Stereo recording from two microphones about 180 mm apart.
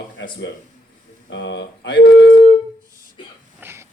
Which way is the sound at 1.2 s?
80° left.